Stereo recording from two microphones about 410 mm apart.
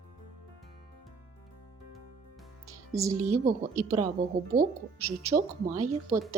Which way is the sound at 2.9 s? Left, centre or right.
Centre.